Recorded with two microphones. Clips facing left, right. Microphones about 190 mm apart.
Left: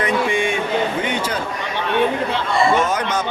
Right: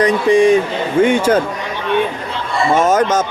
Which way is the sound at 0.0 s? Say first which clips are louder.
Right 8 dB; 35° right (ahead or behind).